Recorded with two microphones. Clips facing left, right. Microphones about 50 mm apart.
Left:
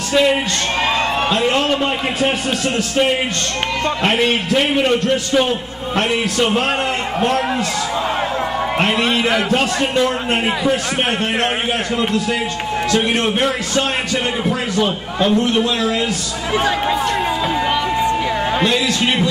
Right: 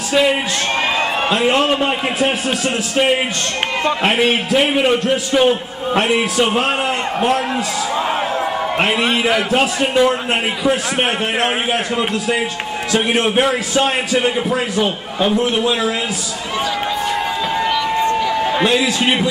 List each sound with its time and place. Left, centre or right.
0.1 s a man's voice: centre
8.7 s a man's voice: centre
12.0 s a man's voice: centre
18.1 s a sound: centre
18.6 s a man's voice: centre